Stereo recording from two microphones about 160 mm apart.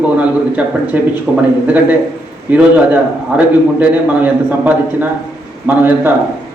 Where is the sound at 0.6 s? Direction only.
5° right (ahead or behind).